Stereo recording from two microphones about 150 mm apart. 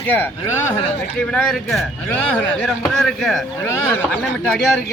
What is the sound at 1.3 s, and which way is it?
A man's voice, centre (ahead or behind).